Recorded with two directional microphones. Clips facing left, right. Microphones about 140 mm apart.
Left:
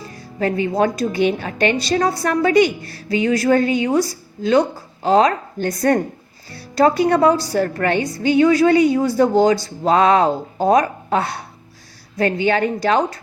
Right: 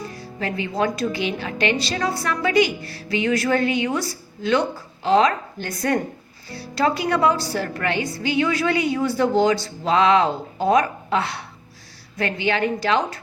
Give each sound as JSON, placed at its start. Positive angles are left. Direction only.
{"t": 0.3, "sound": "a woman's voice", "side_deg": 40}